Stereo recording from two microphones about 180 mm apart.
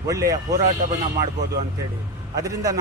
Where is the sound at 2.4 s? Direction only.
20° right (ahead or behind).